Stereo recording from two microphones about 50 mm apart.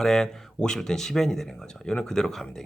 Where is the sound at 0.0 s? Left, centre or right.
Centre.